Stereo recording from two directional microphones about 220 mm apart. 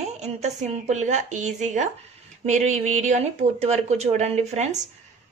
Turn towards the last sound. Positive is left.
turn(degrees=-30)  # may be behind; listen again after turning